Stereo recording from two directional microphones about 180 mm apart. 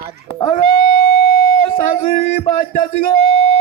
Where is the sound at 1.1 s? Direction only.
60° left (ahead or behind).